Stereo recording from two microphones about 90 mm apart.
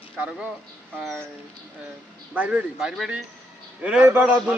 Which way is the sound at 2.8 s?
5° right (ahead or behind).